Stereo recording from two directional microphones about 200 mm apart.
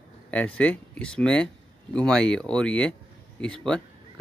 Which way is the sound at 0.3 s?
5° left (ahead or behind).